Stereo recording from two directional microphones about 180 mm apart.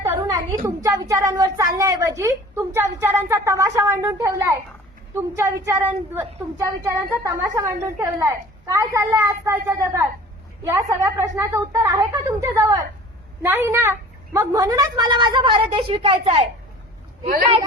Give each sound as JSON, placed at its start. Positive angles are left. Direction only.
{"t": 0.0, "sound": "a woman's voice", "side_deg": -20}